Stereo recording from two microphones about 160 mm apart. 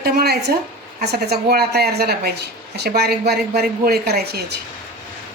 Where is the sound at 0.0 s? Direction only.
80° right.